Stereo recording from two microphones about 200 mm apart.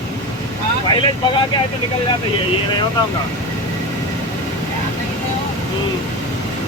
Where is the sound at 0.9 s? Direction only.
20° left (ahead or behind).